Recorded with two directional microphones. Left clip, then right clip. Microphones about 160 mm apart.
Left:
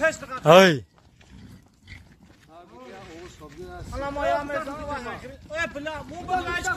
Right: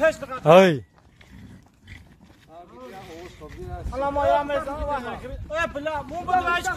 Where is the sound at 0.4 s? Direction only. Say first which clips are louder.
Even; 5° left (ahead or behind).